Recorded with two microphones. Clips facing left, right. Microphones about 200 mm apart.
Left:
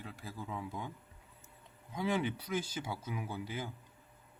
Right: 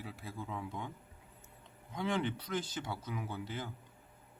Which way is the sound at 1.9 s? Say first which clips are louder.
Left 1 dB; 5° left (ahead or behind).